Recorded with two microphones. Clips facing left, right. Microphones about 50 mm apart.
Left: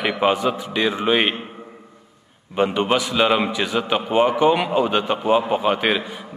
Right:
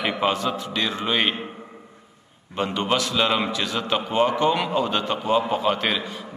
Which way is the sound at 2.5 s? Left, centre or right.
Centre.